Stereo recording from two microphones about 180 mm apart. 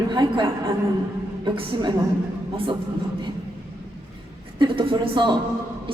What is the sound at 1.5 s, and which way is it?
Speech, 25° right (ahead or behind).